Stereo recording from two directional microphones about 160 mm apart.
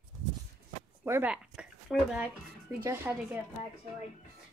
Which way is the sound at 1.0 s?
10° right (ahead or behind).